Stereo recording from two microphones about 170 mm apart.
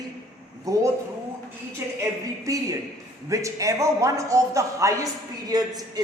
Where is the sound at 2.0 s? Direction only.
20° right (ahead or behind).